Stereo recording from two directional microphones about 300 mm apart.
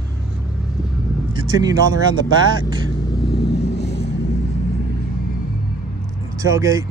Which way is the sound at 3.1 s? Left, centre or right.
Left.